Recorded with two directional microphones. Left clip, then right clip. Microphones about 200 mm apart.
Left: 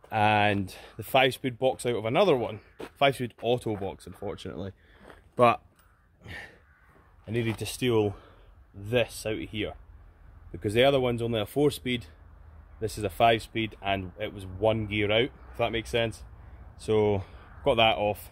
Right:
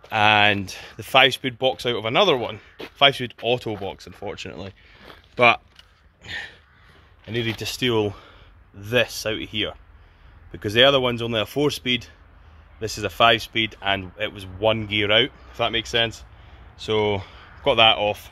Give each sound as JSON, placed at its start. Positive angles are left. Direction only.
{"t": 0.1, "sound": "speech", "side_deg": 5}
{"t": 7.2, "sound": "speech", "side_deg": 0}